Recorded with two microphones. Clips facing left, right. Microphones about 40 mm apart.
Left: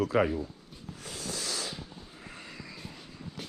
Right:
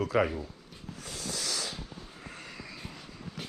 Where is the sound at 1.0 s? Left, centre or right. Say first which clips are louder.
Even; left.